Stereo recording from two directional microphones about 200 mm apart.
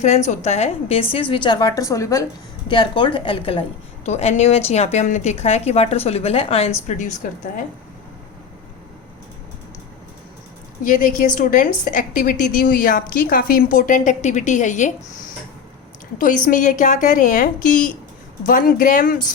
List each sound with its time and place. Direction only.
0.3 s a woman's voice: 35° left (ahead or behind)
10.8 s a woman's voice: 40° left (ahead or behind)
16.1 s a woman's voice: 40° left (ahead or behind)